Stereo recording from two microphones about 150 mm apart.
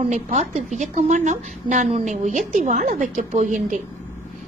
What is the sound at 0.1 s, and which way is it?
A woman's voice, 50° right (ahead or behind).